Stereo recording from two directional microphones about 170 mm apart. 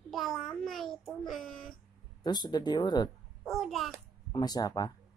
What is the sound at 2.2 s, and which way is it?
Speech, 25° left (ahead or behind).